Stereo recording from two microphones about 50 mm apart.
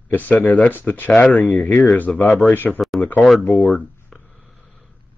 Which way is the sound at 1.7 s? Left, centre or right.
Left.